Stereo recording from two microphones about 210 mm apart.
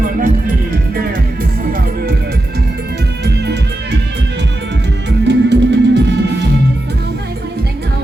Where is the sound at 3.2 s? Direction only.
50° right (ahead or behind).